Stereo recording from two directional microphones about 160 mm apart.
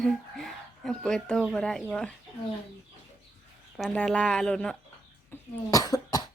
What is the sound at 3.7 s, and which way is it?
Speech, 5° left (ahead or behind).